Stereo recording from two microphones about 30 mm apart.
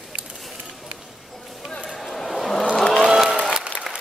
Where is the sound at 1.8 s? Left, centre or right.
Centre.